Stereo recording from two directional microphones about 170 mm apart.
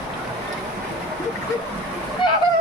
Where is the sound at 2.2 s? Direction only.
30° left (ahead or behind).